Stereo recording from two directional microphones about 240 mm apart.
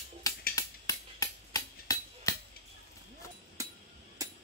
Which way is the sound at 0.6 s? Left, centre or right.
Centre.